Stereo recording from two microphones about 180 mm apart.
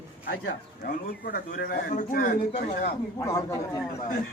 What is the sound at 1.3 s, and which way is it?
A man's voice, 50° left (ahead or behind).